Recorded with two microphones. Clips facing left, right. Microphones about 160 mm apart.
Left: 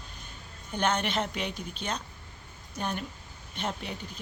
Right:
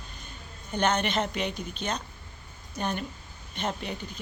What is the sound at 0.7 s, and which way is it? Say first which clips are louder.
Speech: right 2 dB; 5° left (ahead or behind).